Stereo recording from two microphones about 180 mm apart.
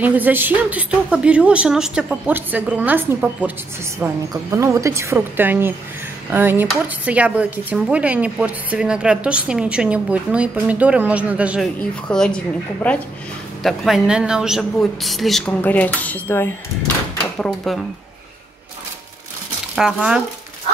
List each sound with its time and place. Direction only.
0.0 s speech: 10° right (ahead or behind)
11.9 s a woman's voice: 5° left (ahead or behind)
13.6 s a woman's voice: centre (ahead or behind)
19.7 s speech: 5° right (ahead or behind)